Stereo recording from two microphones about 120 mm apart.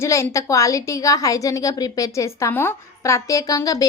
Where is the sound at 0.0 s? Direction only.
25° left (ahead or behind).